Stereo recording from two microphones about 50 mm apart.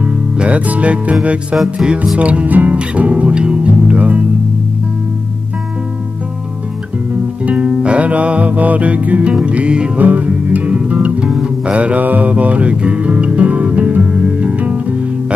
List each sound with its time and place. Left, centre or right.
0.0 s music: right
2.1 s music: right
7.4 s music: right
9.9 s music: right